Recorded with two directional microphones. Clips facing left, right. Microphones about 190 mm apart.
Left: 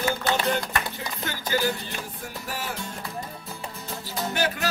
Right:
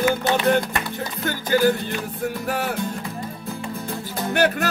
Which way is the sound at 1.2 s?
50° right (ahead or behind).